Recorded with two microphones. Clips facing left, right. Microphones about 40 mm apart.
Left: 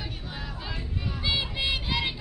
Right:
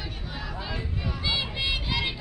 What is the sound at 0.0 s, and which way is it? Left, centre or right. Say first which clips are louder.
Music: right 1 dB; centre.